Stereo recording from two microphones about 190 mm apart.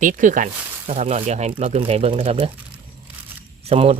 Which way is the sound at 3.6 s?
30° right (ahead or behind).